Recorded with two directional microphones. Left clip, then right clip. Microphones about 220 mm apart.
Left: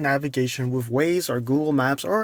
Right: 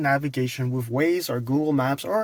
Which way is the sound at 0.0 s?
30° left (ahead or behind).